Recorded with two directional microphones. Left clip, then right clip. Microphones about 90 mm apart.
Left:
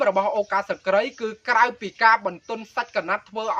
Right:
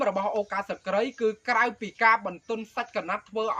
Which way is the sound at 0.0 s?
30° left (ahead or behind).